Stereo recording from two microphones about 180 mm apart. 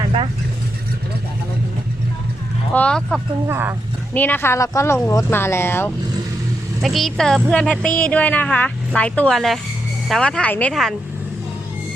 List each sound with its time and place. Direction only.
0.0 s vehicle: 30° right (ahead or behind)
2.7 s speech: 5° left (ahead or behind)
3.4 s speech: 15° right (ahead or behind)
4.1 s speech: 10° left (ahead or behind)
6.8 s speech: centre (ahead or behind)